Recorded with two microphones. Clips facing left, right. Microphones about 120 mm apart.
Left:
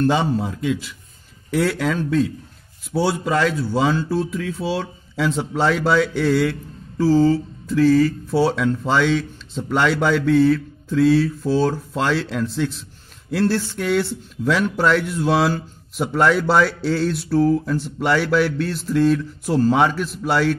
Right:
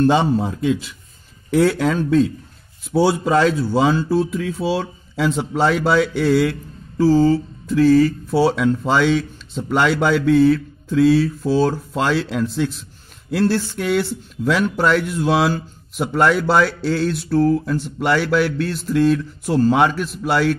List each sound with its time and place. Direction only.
0.0 s a man's voice: 25° right (ahead or behind); by 20.5 s 5° right (ahead or behind)